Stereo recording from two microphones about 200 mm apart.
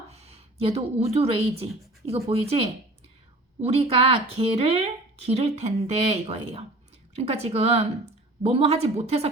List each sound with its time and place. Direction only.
0.1 s a woman's voice: 30° right (ahead or behind)